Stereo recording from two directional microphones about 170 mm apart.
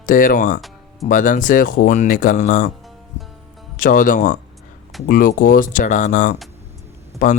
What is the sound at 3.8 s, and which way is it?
Speech, 55° left (ahead or behind).